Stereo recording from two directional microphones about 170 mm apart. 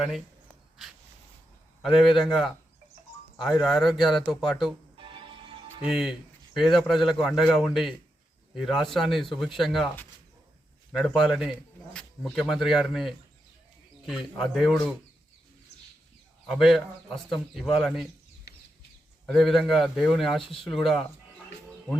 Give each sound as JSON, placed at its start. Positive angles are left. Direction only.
{"t": 1.8, "sound": "a man's voice", "side_deg": 0}
{"t": 3.6, "sound": "a man's voice", "side_deg": 0}
{"t": 4.9, "sound": "music", "side_deg": -30}
{"t": 5.8, "sound": "a man's voice", "side_deg": -5}
{"t": 10.9, "sound": "a man's voice", "side_deg": 0}
{"t": 16.5, "sound": "a man's voice", "side_deg": 0}
{"t": 19.3, "sound": "a man's voice", "side_deg": 0}